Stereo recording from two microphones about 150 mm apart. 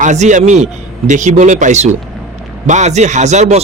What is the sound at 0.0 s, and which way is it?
Speech, 55° right (ahead or behind).